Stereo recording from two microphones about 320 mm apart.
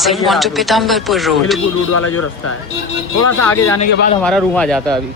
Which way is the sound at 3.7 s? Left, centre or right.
Left.